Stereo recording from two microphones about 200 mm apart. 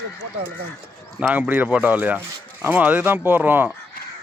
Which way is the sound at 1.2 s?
10° right (ahead or behind).